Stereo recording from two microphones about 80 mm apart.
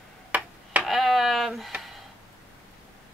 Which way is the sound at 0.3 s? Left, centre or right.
Centre.